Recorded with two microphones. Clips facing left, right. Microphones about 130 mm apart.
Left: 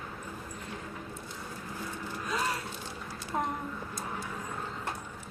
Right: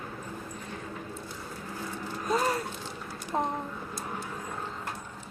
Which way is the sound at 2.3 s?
40° right (ahead or behind).